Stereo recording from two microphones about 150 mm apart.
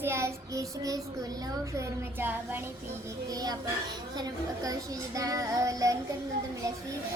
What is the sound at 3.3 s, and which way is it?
A child's voice, 25° right (ahead or behind).